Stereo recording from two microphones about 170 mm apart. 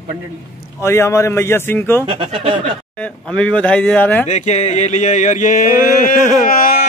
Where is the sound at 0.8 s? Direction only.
15° left (ahead or behind).